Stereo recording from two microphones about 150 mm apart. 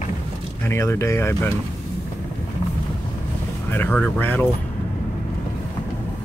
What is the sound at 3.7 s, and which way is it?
Speech, 10° left (ahead or behind).